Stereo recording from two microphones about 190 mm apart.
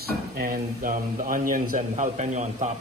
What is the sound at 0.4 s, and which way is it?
Speech, 45° right (ahead or behind).